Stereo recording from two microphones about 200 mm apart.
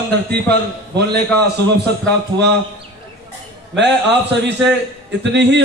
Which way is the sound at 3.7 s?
60° right (ahead or behind).